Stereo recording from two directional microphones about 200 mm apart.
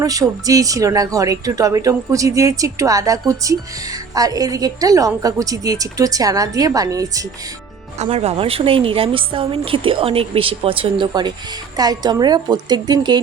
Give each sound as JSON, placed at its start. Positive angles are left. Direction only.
{"t": 0.0, "sound": "speech", "side_deg": -15}
{"t": 7.9, "sound": "a woman's voice", "side_deg": -30}